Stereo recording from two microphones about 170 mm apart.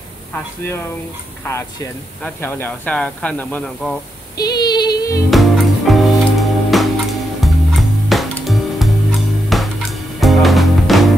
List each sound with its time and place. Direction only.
1.4 s speech: 15° left (ahead or behind)
4.4 s female singing: 25° left (ahead or behind)
5.3 s music: centre (ahead or behind)